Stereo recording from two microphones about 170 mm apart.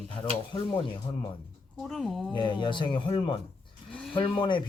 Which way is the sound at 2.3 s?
30° left (ahead or behind).